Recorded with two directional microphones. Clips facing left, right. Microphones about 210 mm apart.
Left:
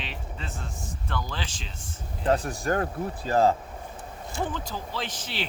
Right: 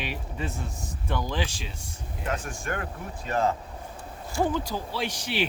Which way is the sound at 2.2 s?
35° left (ahead or behind).